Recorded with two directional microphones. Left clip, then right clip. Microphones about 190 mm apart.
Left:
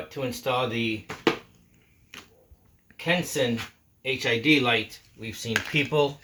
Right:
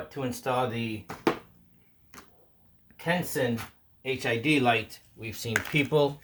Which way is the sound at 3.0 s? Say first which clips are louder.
Left 3 dB; 15° right (ahead or behind).